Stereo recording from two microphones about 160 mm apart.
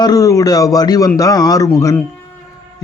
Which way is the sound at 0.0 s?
20° left (ahead or behind).